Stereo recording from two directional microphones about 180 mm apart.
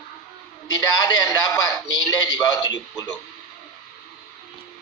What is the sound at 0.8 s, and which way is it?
A man's voice, 20° left (ahead or behind).